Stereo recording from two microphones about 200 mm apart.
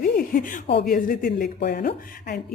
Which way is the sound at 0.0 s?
45° left (ahead or behind).